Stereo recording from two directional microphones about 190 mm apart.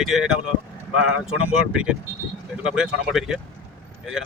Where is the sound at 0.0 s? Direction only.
5° right (ahead or behind).